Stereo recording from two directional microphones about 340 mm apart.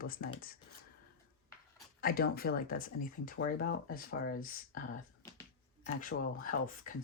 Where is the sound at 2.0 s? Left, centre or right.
Left.